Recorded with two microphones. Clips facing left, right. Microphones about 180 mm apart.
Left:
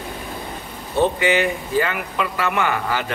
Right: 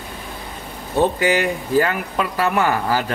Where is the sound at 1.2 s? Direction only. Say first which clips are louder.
Even; 40° right (ahead or behind).